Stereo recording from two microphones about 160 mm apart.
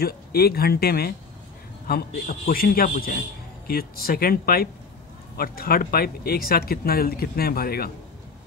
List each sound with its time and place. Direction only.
0.0 s a man's voice: 75° left (ahead or behind)